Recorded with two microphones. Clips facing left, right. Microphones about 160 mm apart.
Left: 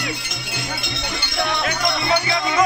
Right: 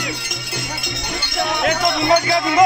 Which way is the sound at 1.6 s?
55° right (ahead or behind).